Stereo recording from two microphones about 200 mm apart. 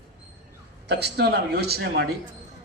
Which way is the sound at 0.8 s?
55° right (ahead or behind).